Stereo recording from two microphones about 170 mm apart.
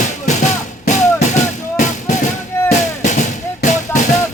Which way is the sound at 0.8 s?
45° left (ahead or behind).